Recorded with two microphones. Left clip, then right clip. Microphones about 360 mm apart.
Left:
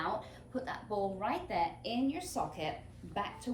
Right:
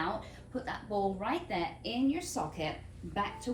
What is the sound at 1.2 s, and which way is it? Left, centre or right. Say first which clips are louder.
Speech: left 1 dB; centre.